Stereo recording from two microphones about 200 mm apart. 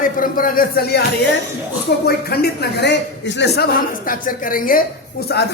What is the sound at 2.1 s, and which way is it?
A man's voice, 50° left (ahead or behind).